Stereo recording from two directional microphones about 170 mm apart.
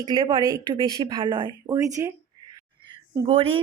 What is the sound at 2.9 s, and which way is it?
Speech, 30° right (ahead or behind).